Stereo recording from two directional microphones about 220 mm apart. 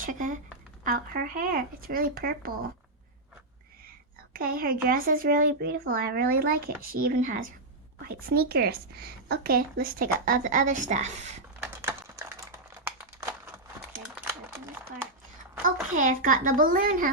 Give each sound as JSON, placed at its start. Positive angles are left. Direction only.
{"t": 0.0, "sound": "a sound", "side_deg": -40}
{"t": 0.9, "sound": "a woman's voice", "side_deg": -40}
{"t": 4.4, "sound": "a woman's voice", "side_deg": -40}
{"t": 11.7, "sound": "typing", "side_deg": -10}
{"t": 15.6, "sound": "a woman's voice", "side_deg": -35}